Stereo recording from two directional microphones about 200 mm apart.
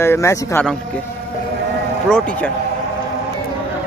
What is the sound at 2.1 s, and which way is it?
Speech, 5° left (ahead or behind).